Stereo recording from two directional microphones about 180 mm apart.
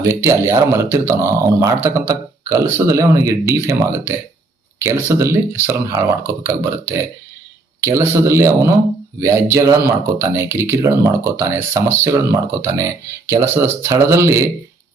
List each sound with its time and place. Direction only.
0.0 s speech: 15° right (ahead or behind)